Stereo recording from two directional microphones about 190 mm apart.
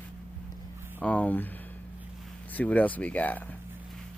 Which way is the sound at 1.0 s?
5° left (ahead or behind).